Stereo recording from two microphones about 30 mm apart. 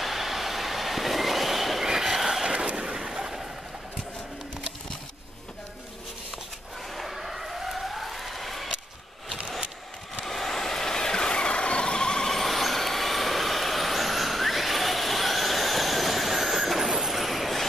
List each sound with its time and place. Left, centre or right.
0.0 s train: centre
1.9 s a sound: centre
2.7 s vehicle: right
6.9 s police car: centre
10.2 s vehicle: centre; by 12.3 s left
12.3 s vehicle: centre